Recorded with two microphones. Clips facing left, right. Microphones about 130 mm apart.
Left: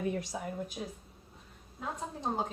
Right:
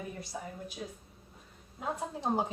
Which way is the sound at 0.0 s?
90° left.